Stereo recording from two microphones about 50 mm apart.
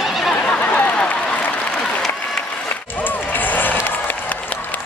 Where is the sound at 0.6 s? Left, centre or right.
Left.